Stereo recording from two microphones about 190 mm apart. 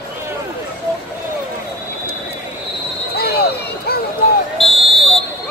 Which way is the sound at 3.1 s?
55° left (ahead or behind).